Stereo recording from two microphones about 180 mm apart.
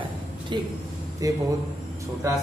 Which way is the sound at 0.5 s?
25° right (ahead or behind).